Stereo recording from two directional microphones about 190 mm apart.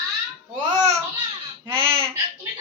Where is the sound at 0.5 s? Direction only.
35° right (ahead or behind).